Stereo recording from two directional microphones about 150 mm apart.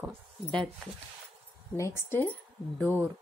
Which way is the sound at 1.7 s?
20° left (ahead or behind).